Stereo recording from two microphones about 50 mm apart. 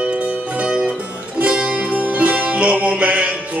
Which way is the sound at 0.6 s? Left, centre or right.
Centre.